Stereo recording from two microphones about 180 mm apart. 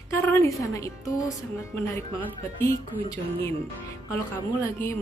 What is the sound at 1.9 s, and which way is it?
Speech, 15° left (ahead or behind).